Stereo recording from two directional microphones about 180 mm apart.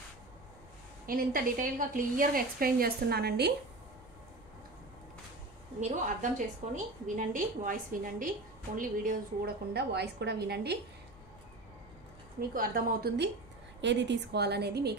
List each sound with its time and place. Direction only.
1.0 s a woman's voice: 55° right (ahead or behind)
5.8 s a woman's voice: 45° right (ahead or behind); by 10.8 s 65° right (ahead or behind)
12.4 s a woman's voice: 50° right (ahead or behind)
13.7 s a woman's voice: 80° right